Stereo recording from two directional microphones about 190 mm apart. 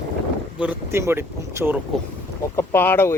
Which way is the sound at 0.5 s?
10° right (ahead or behind).